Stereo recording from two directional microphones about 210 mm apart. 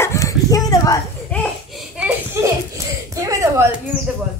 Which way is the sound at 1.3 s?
5° left (ahead or behind).